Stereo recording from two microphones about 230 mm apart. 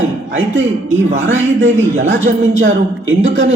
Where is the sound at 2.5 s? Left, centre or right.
Right.